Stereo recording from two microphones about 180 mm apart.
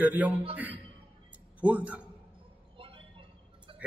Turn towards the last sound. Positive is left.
turn(degrees=-30)  # may be behind; listen again after turning